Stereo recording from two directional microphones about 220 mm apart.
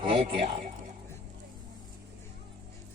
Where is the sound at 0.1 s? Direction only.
25° right (ahead or behind).